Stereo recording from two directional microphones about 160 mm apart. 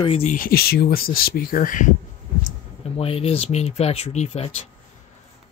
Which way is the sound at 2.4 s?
40° left (ahead or behind).